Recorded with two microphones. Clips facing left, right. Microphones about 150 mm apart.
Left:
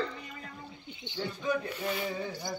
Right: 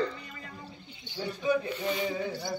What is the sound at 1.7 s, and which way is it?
Speech, 5° left (ahead or behind).